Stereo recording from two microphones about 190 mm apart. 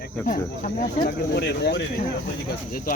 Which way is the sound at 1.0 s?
60° left (ahead or behind).